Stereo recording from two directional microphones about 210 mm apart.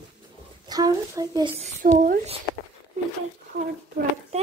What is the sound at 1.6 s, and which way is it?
Speech, 35° right (ahead or behind).